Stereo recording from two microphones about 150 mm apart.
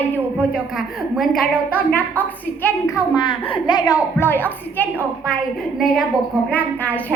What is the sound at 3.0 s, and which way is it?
A child's voice, 30° left (ahead or behind).